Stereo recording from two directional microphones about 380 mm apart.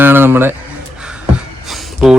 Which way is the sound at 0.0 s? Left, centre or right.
Centre.